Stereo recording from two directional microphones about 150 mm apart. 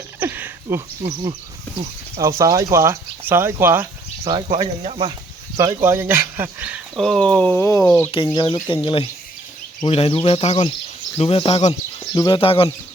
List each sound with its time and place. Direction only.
0.2 s a sound: 10° right (ahead or behind)
1.0 s speech: 25° right (ahead or behind)
4.2 s speech: 35° right (ahead or behind)
5.5 s speech: 20° right (ahead or behind)
6.9 s speech: centre (ahead or behind)
8.1 s speech: 30° left (ahead or behind)